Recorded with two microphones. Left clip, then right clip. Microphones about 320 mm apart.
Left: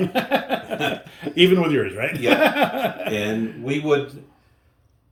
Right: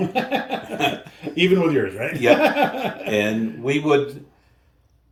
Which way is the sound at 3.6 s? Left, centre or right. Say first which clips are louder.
Right 3 dB; centre.